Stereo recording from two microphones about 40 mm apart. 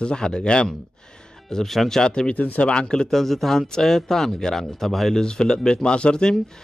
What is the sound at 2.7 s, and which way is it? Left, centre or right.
Speech, left.